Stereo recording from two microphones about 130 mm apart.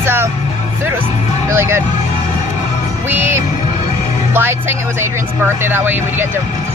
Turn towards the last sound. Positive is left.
turn(degrees=-15)  # may be behind; listen again after turning